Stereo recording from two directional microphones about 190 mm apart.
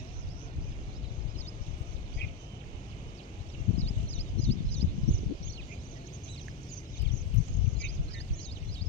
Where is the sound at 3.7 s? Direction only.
35° left (ahead or behind).